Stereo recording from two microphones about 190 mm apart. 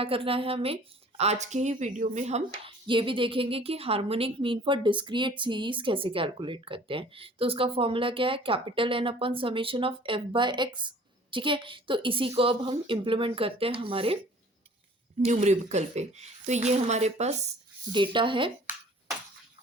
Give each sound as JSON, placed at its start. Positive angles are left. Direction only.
{"t": 0.0, "sound": "a woman's voice", "side_deg": -30}
{"t": 15.2, "sound": "a woman's voice", "side_deg": -35}
{"t": 17.9, "sound": "speech", "side_deg": -25}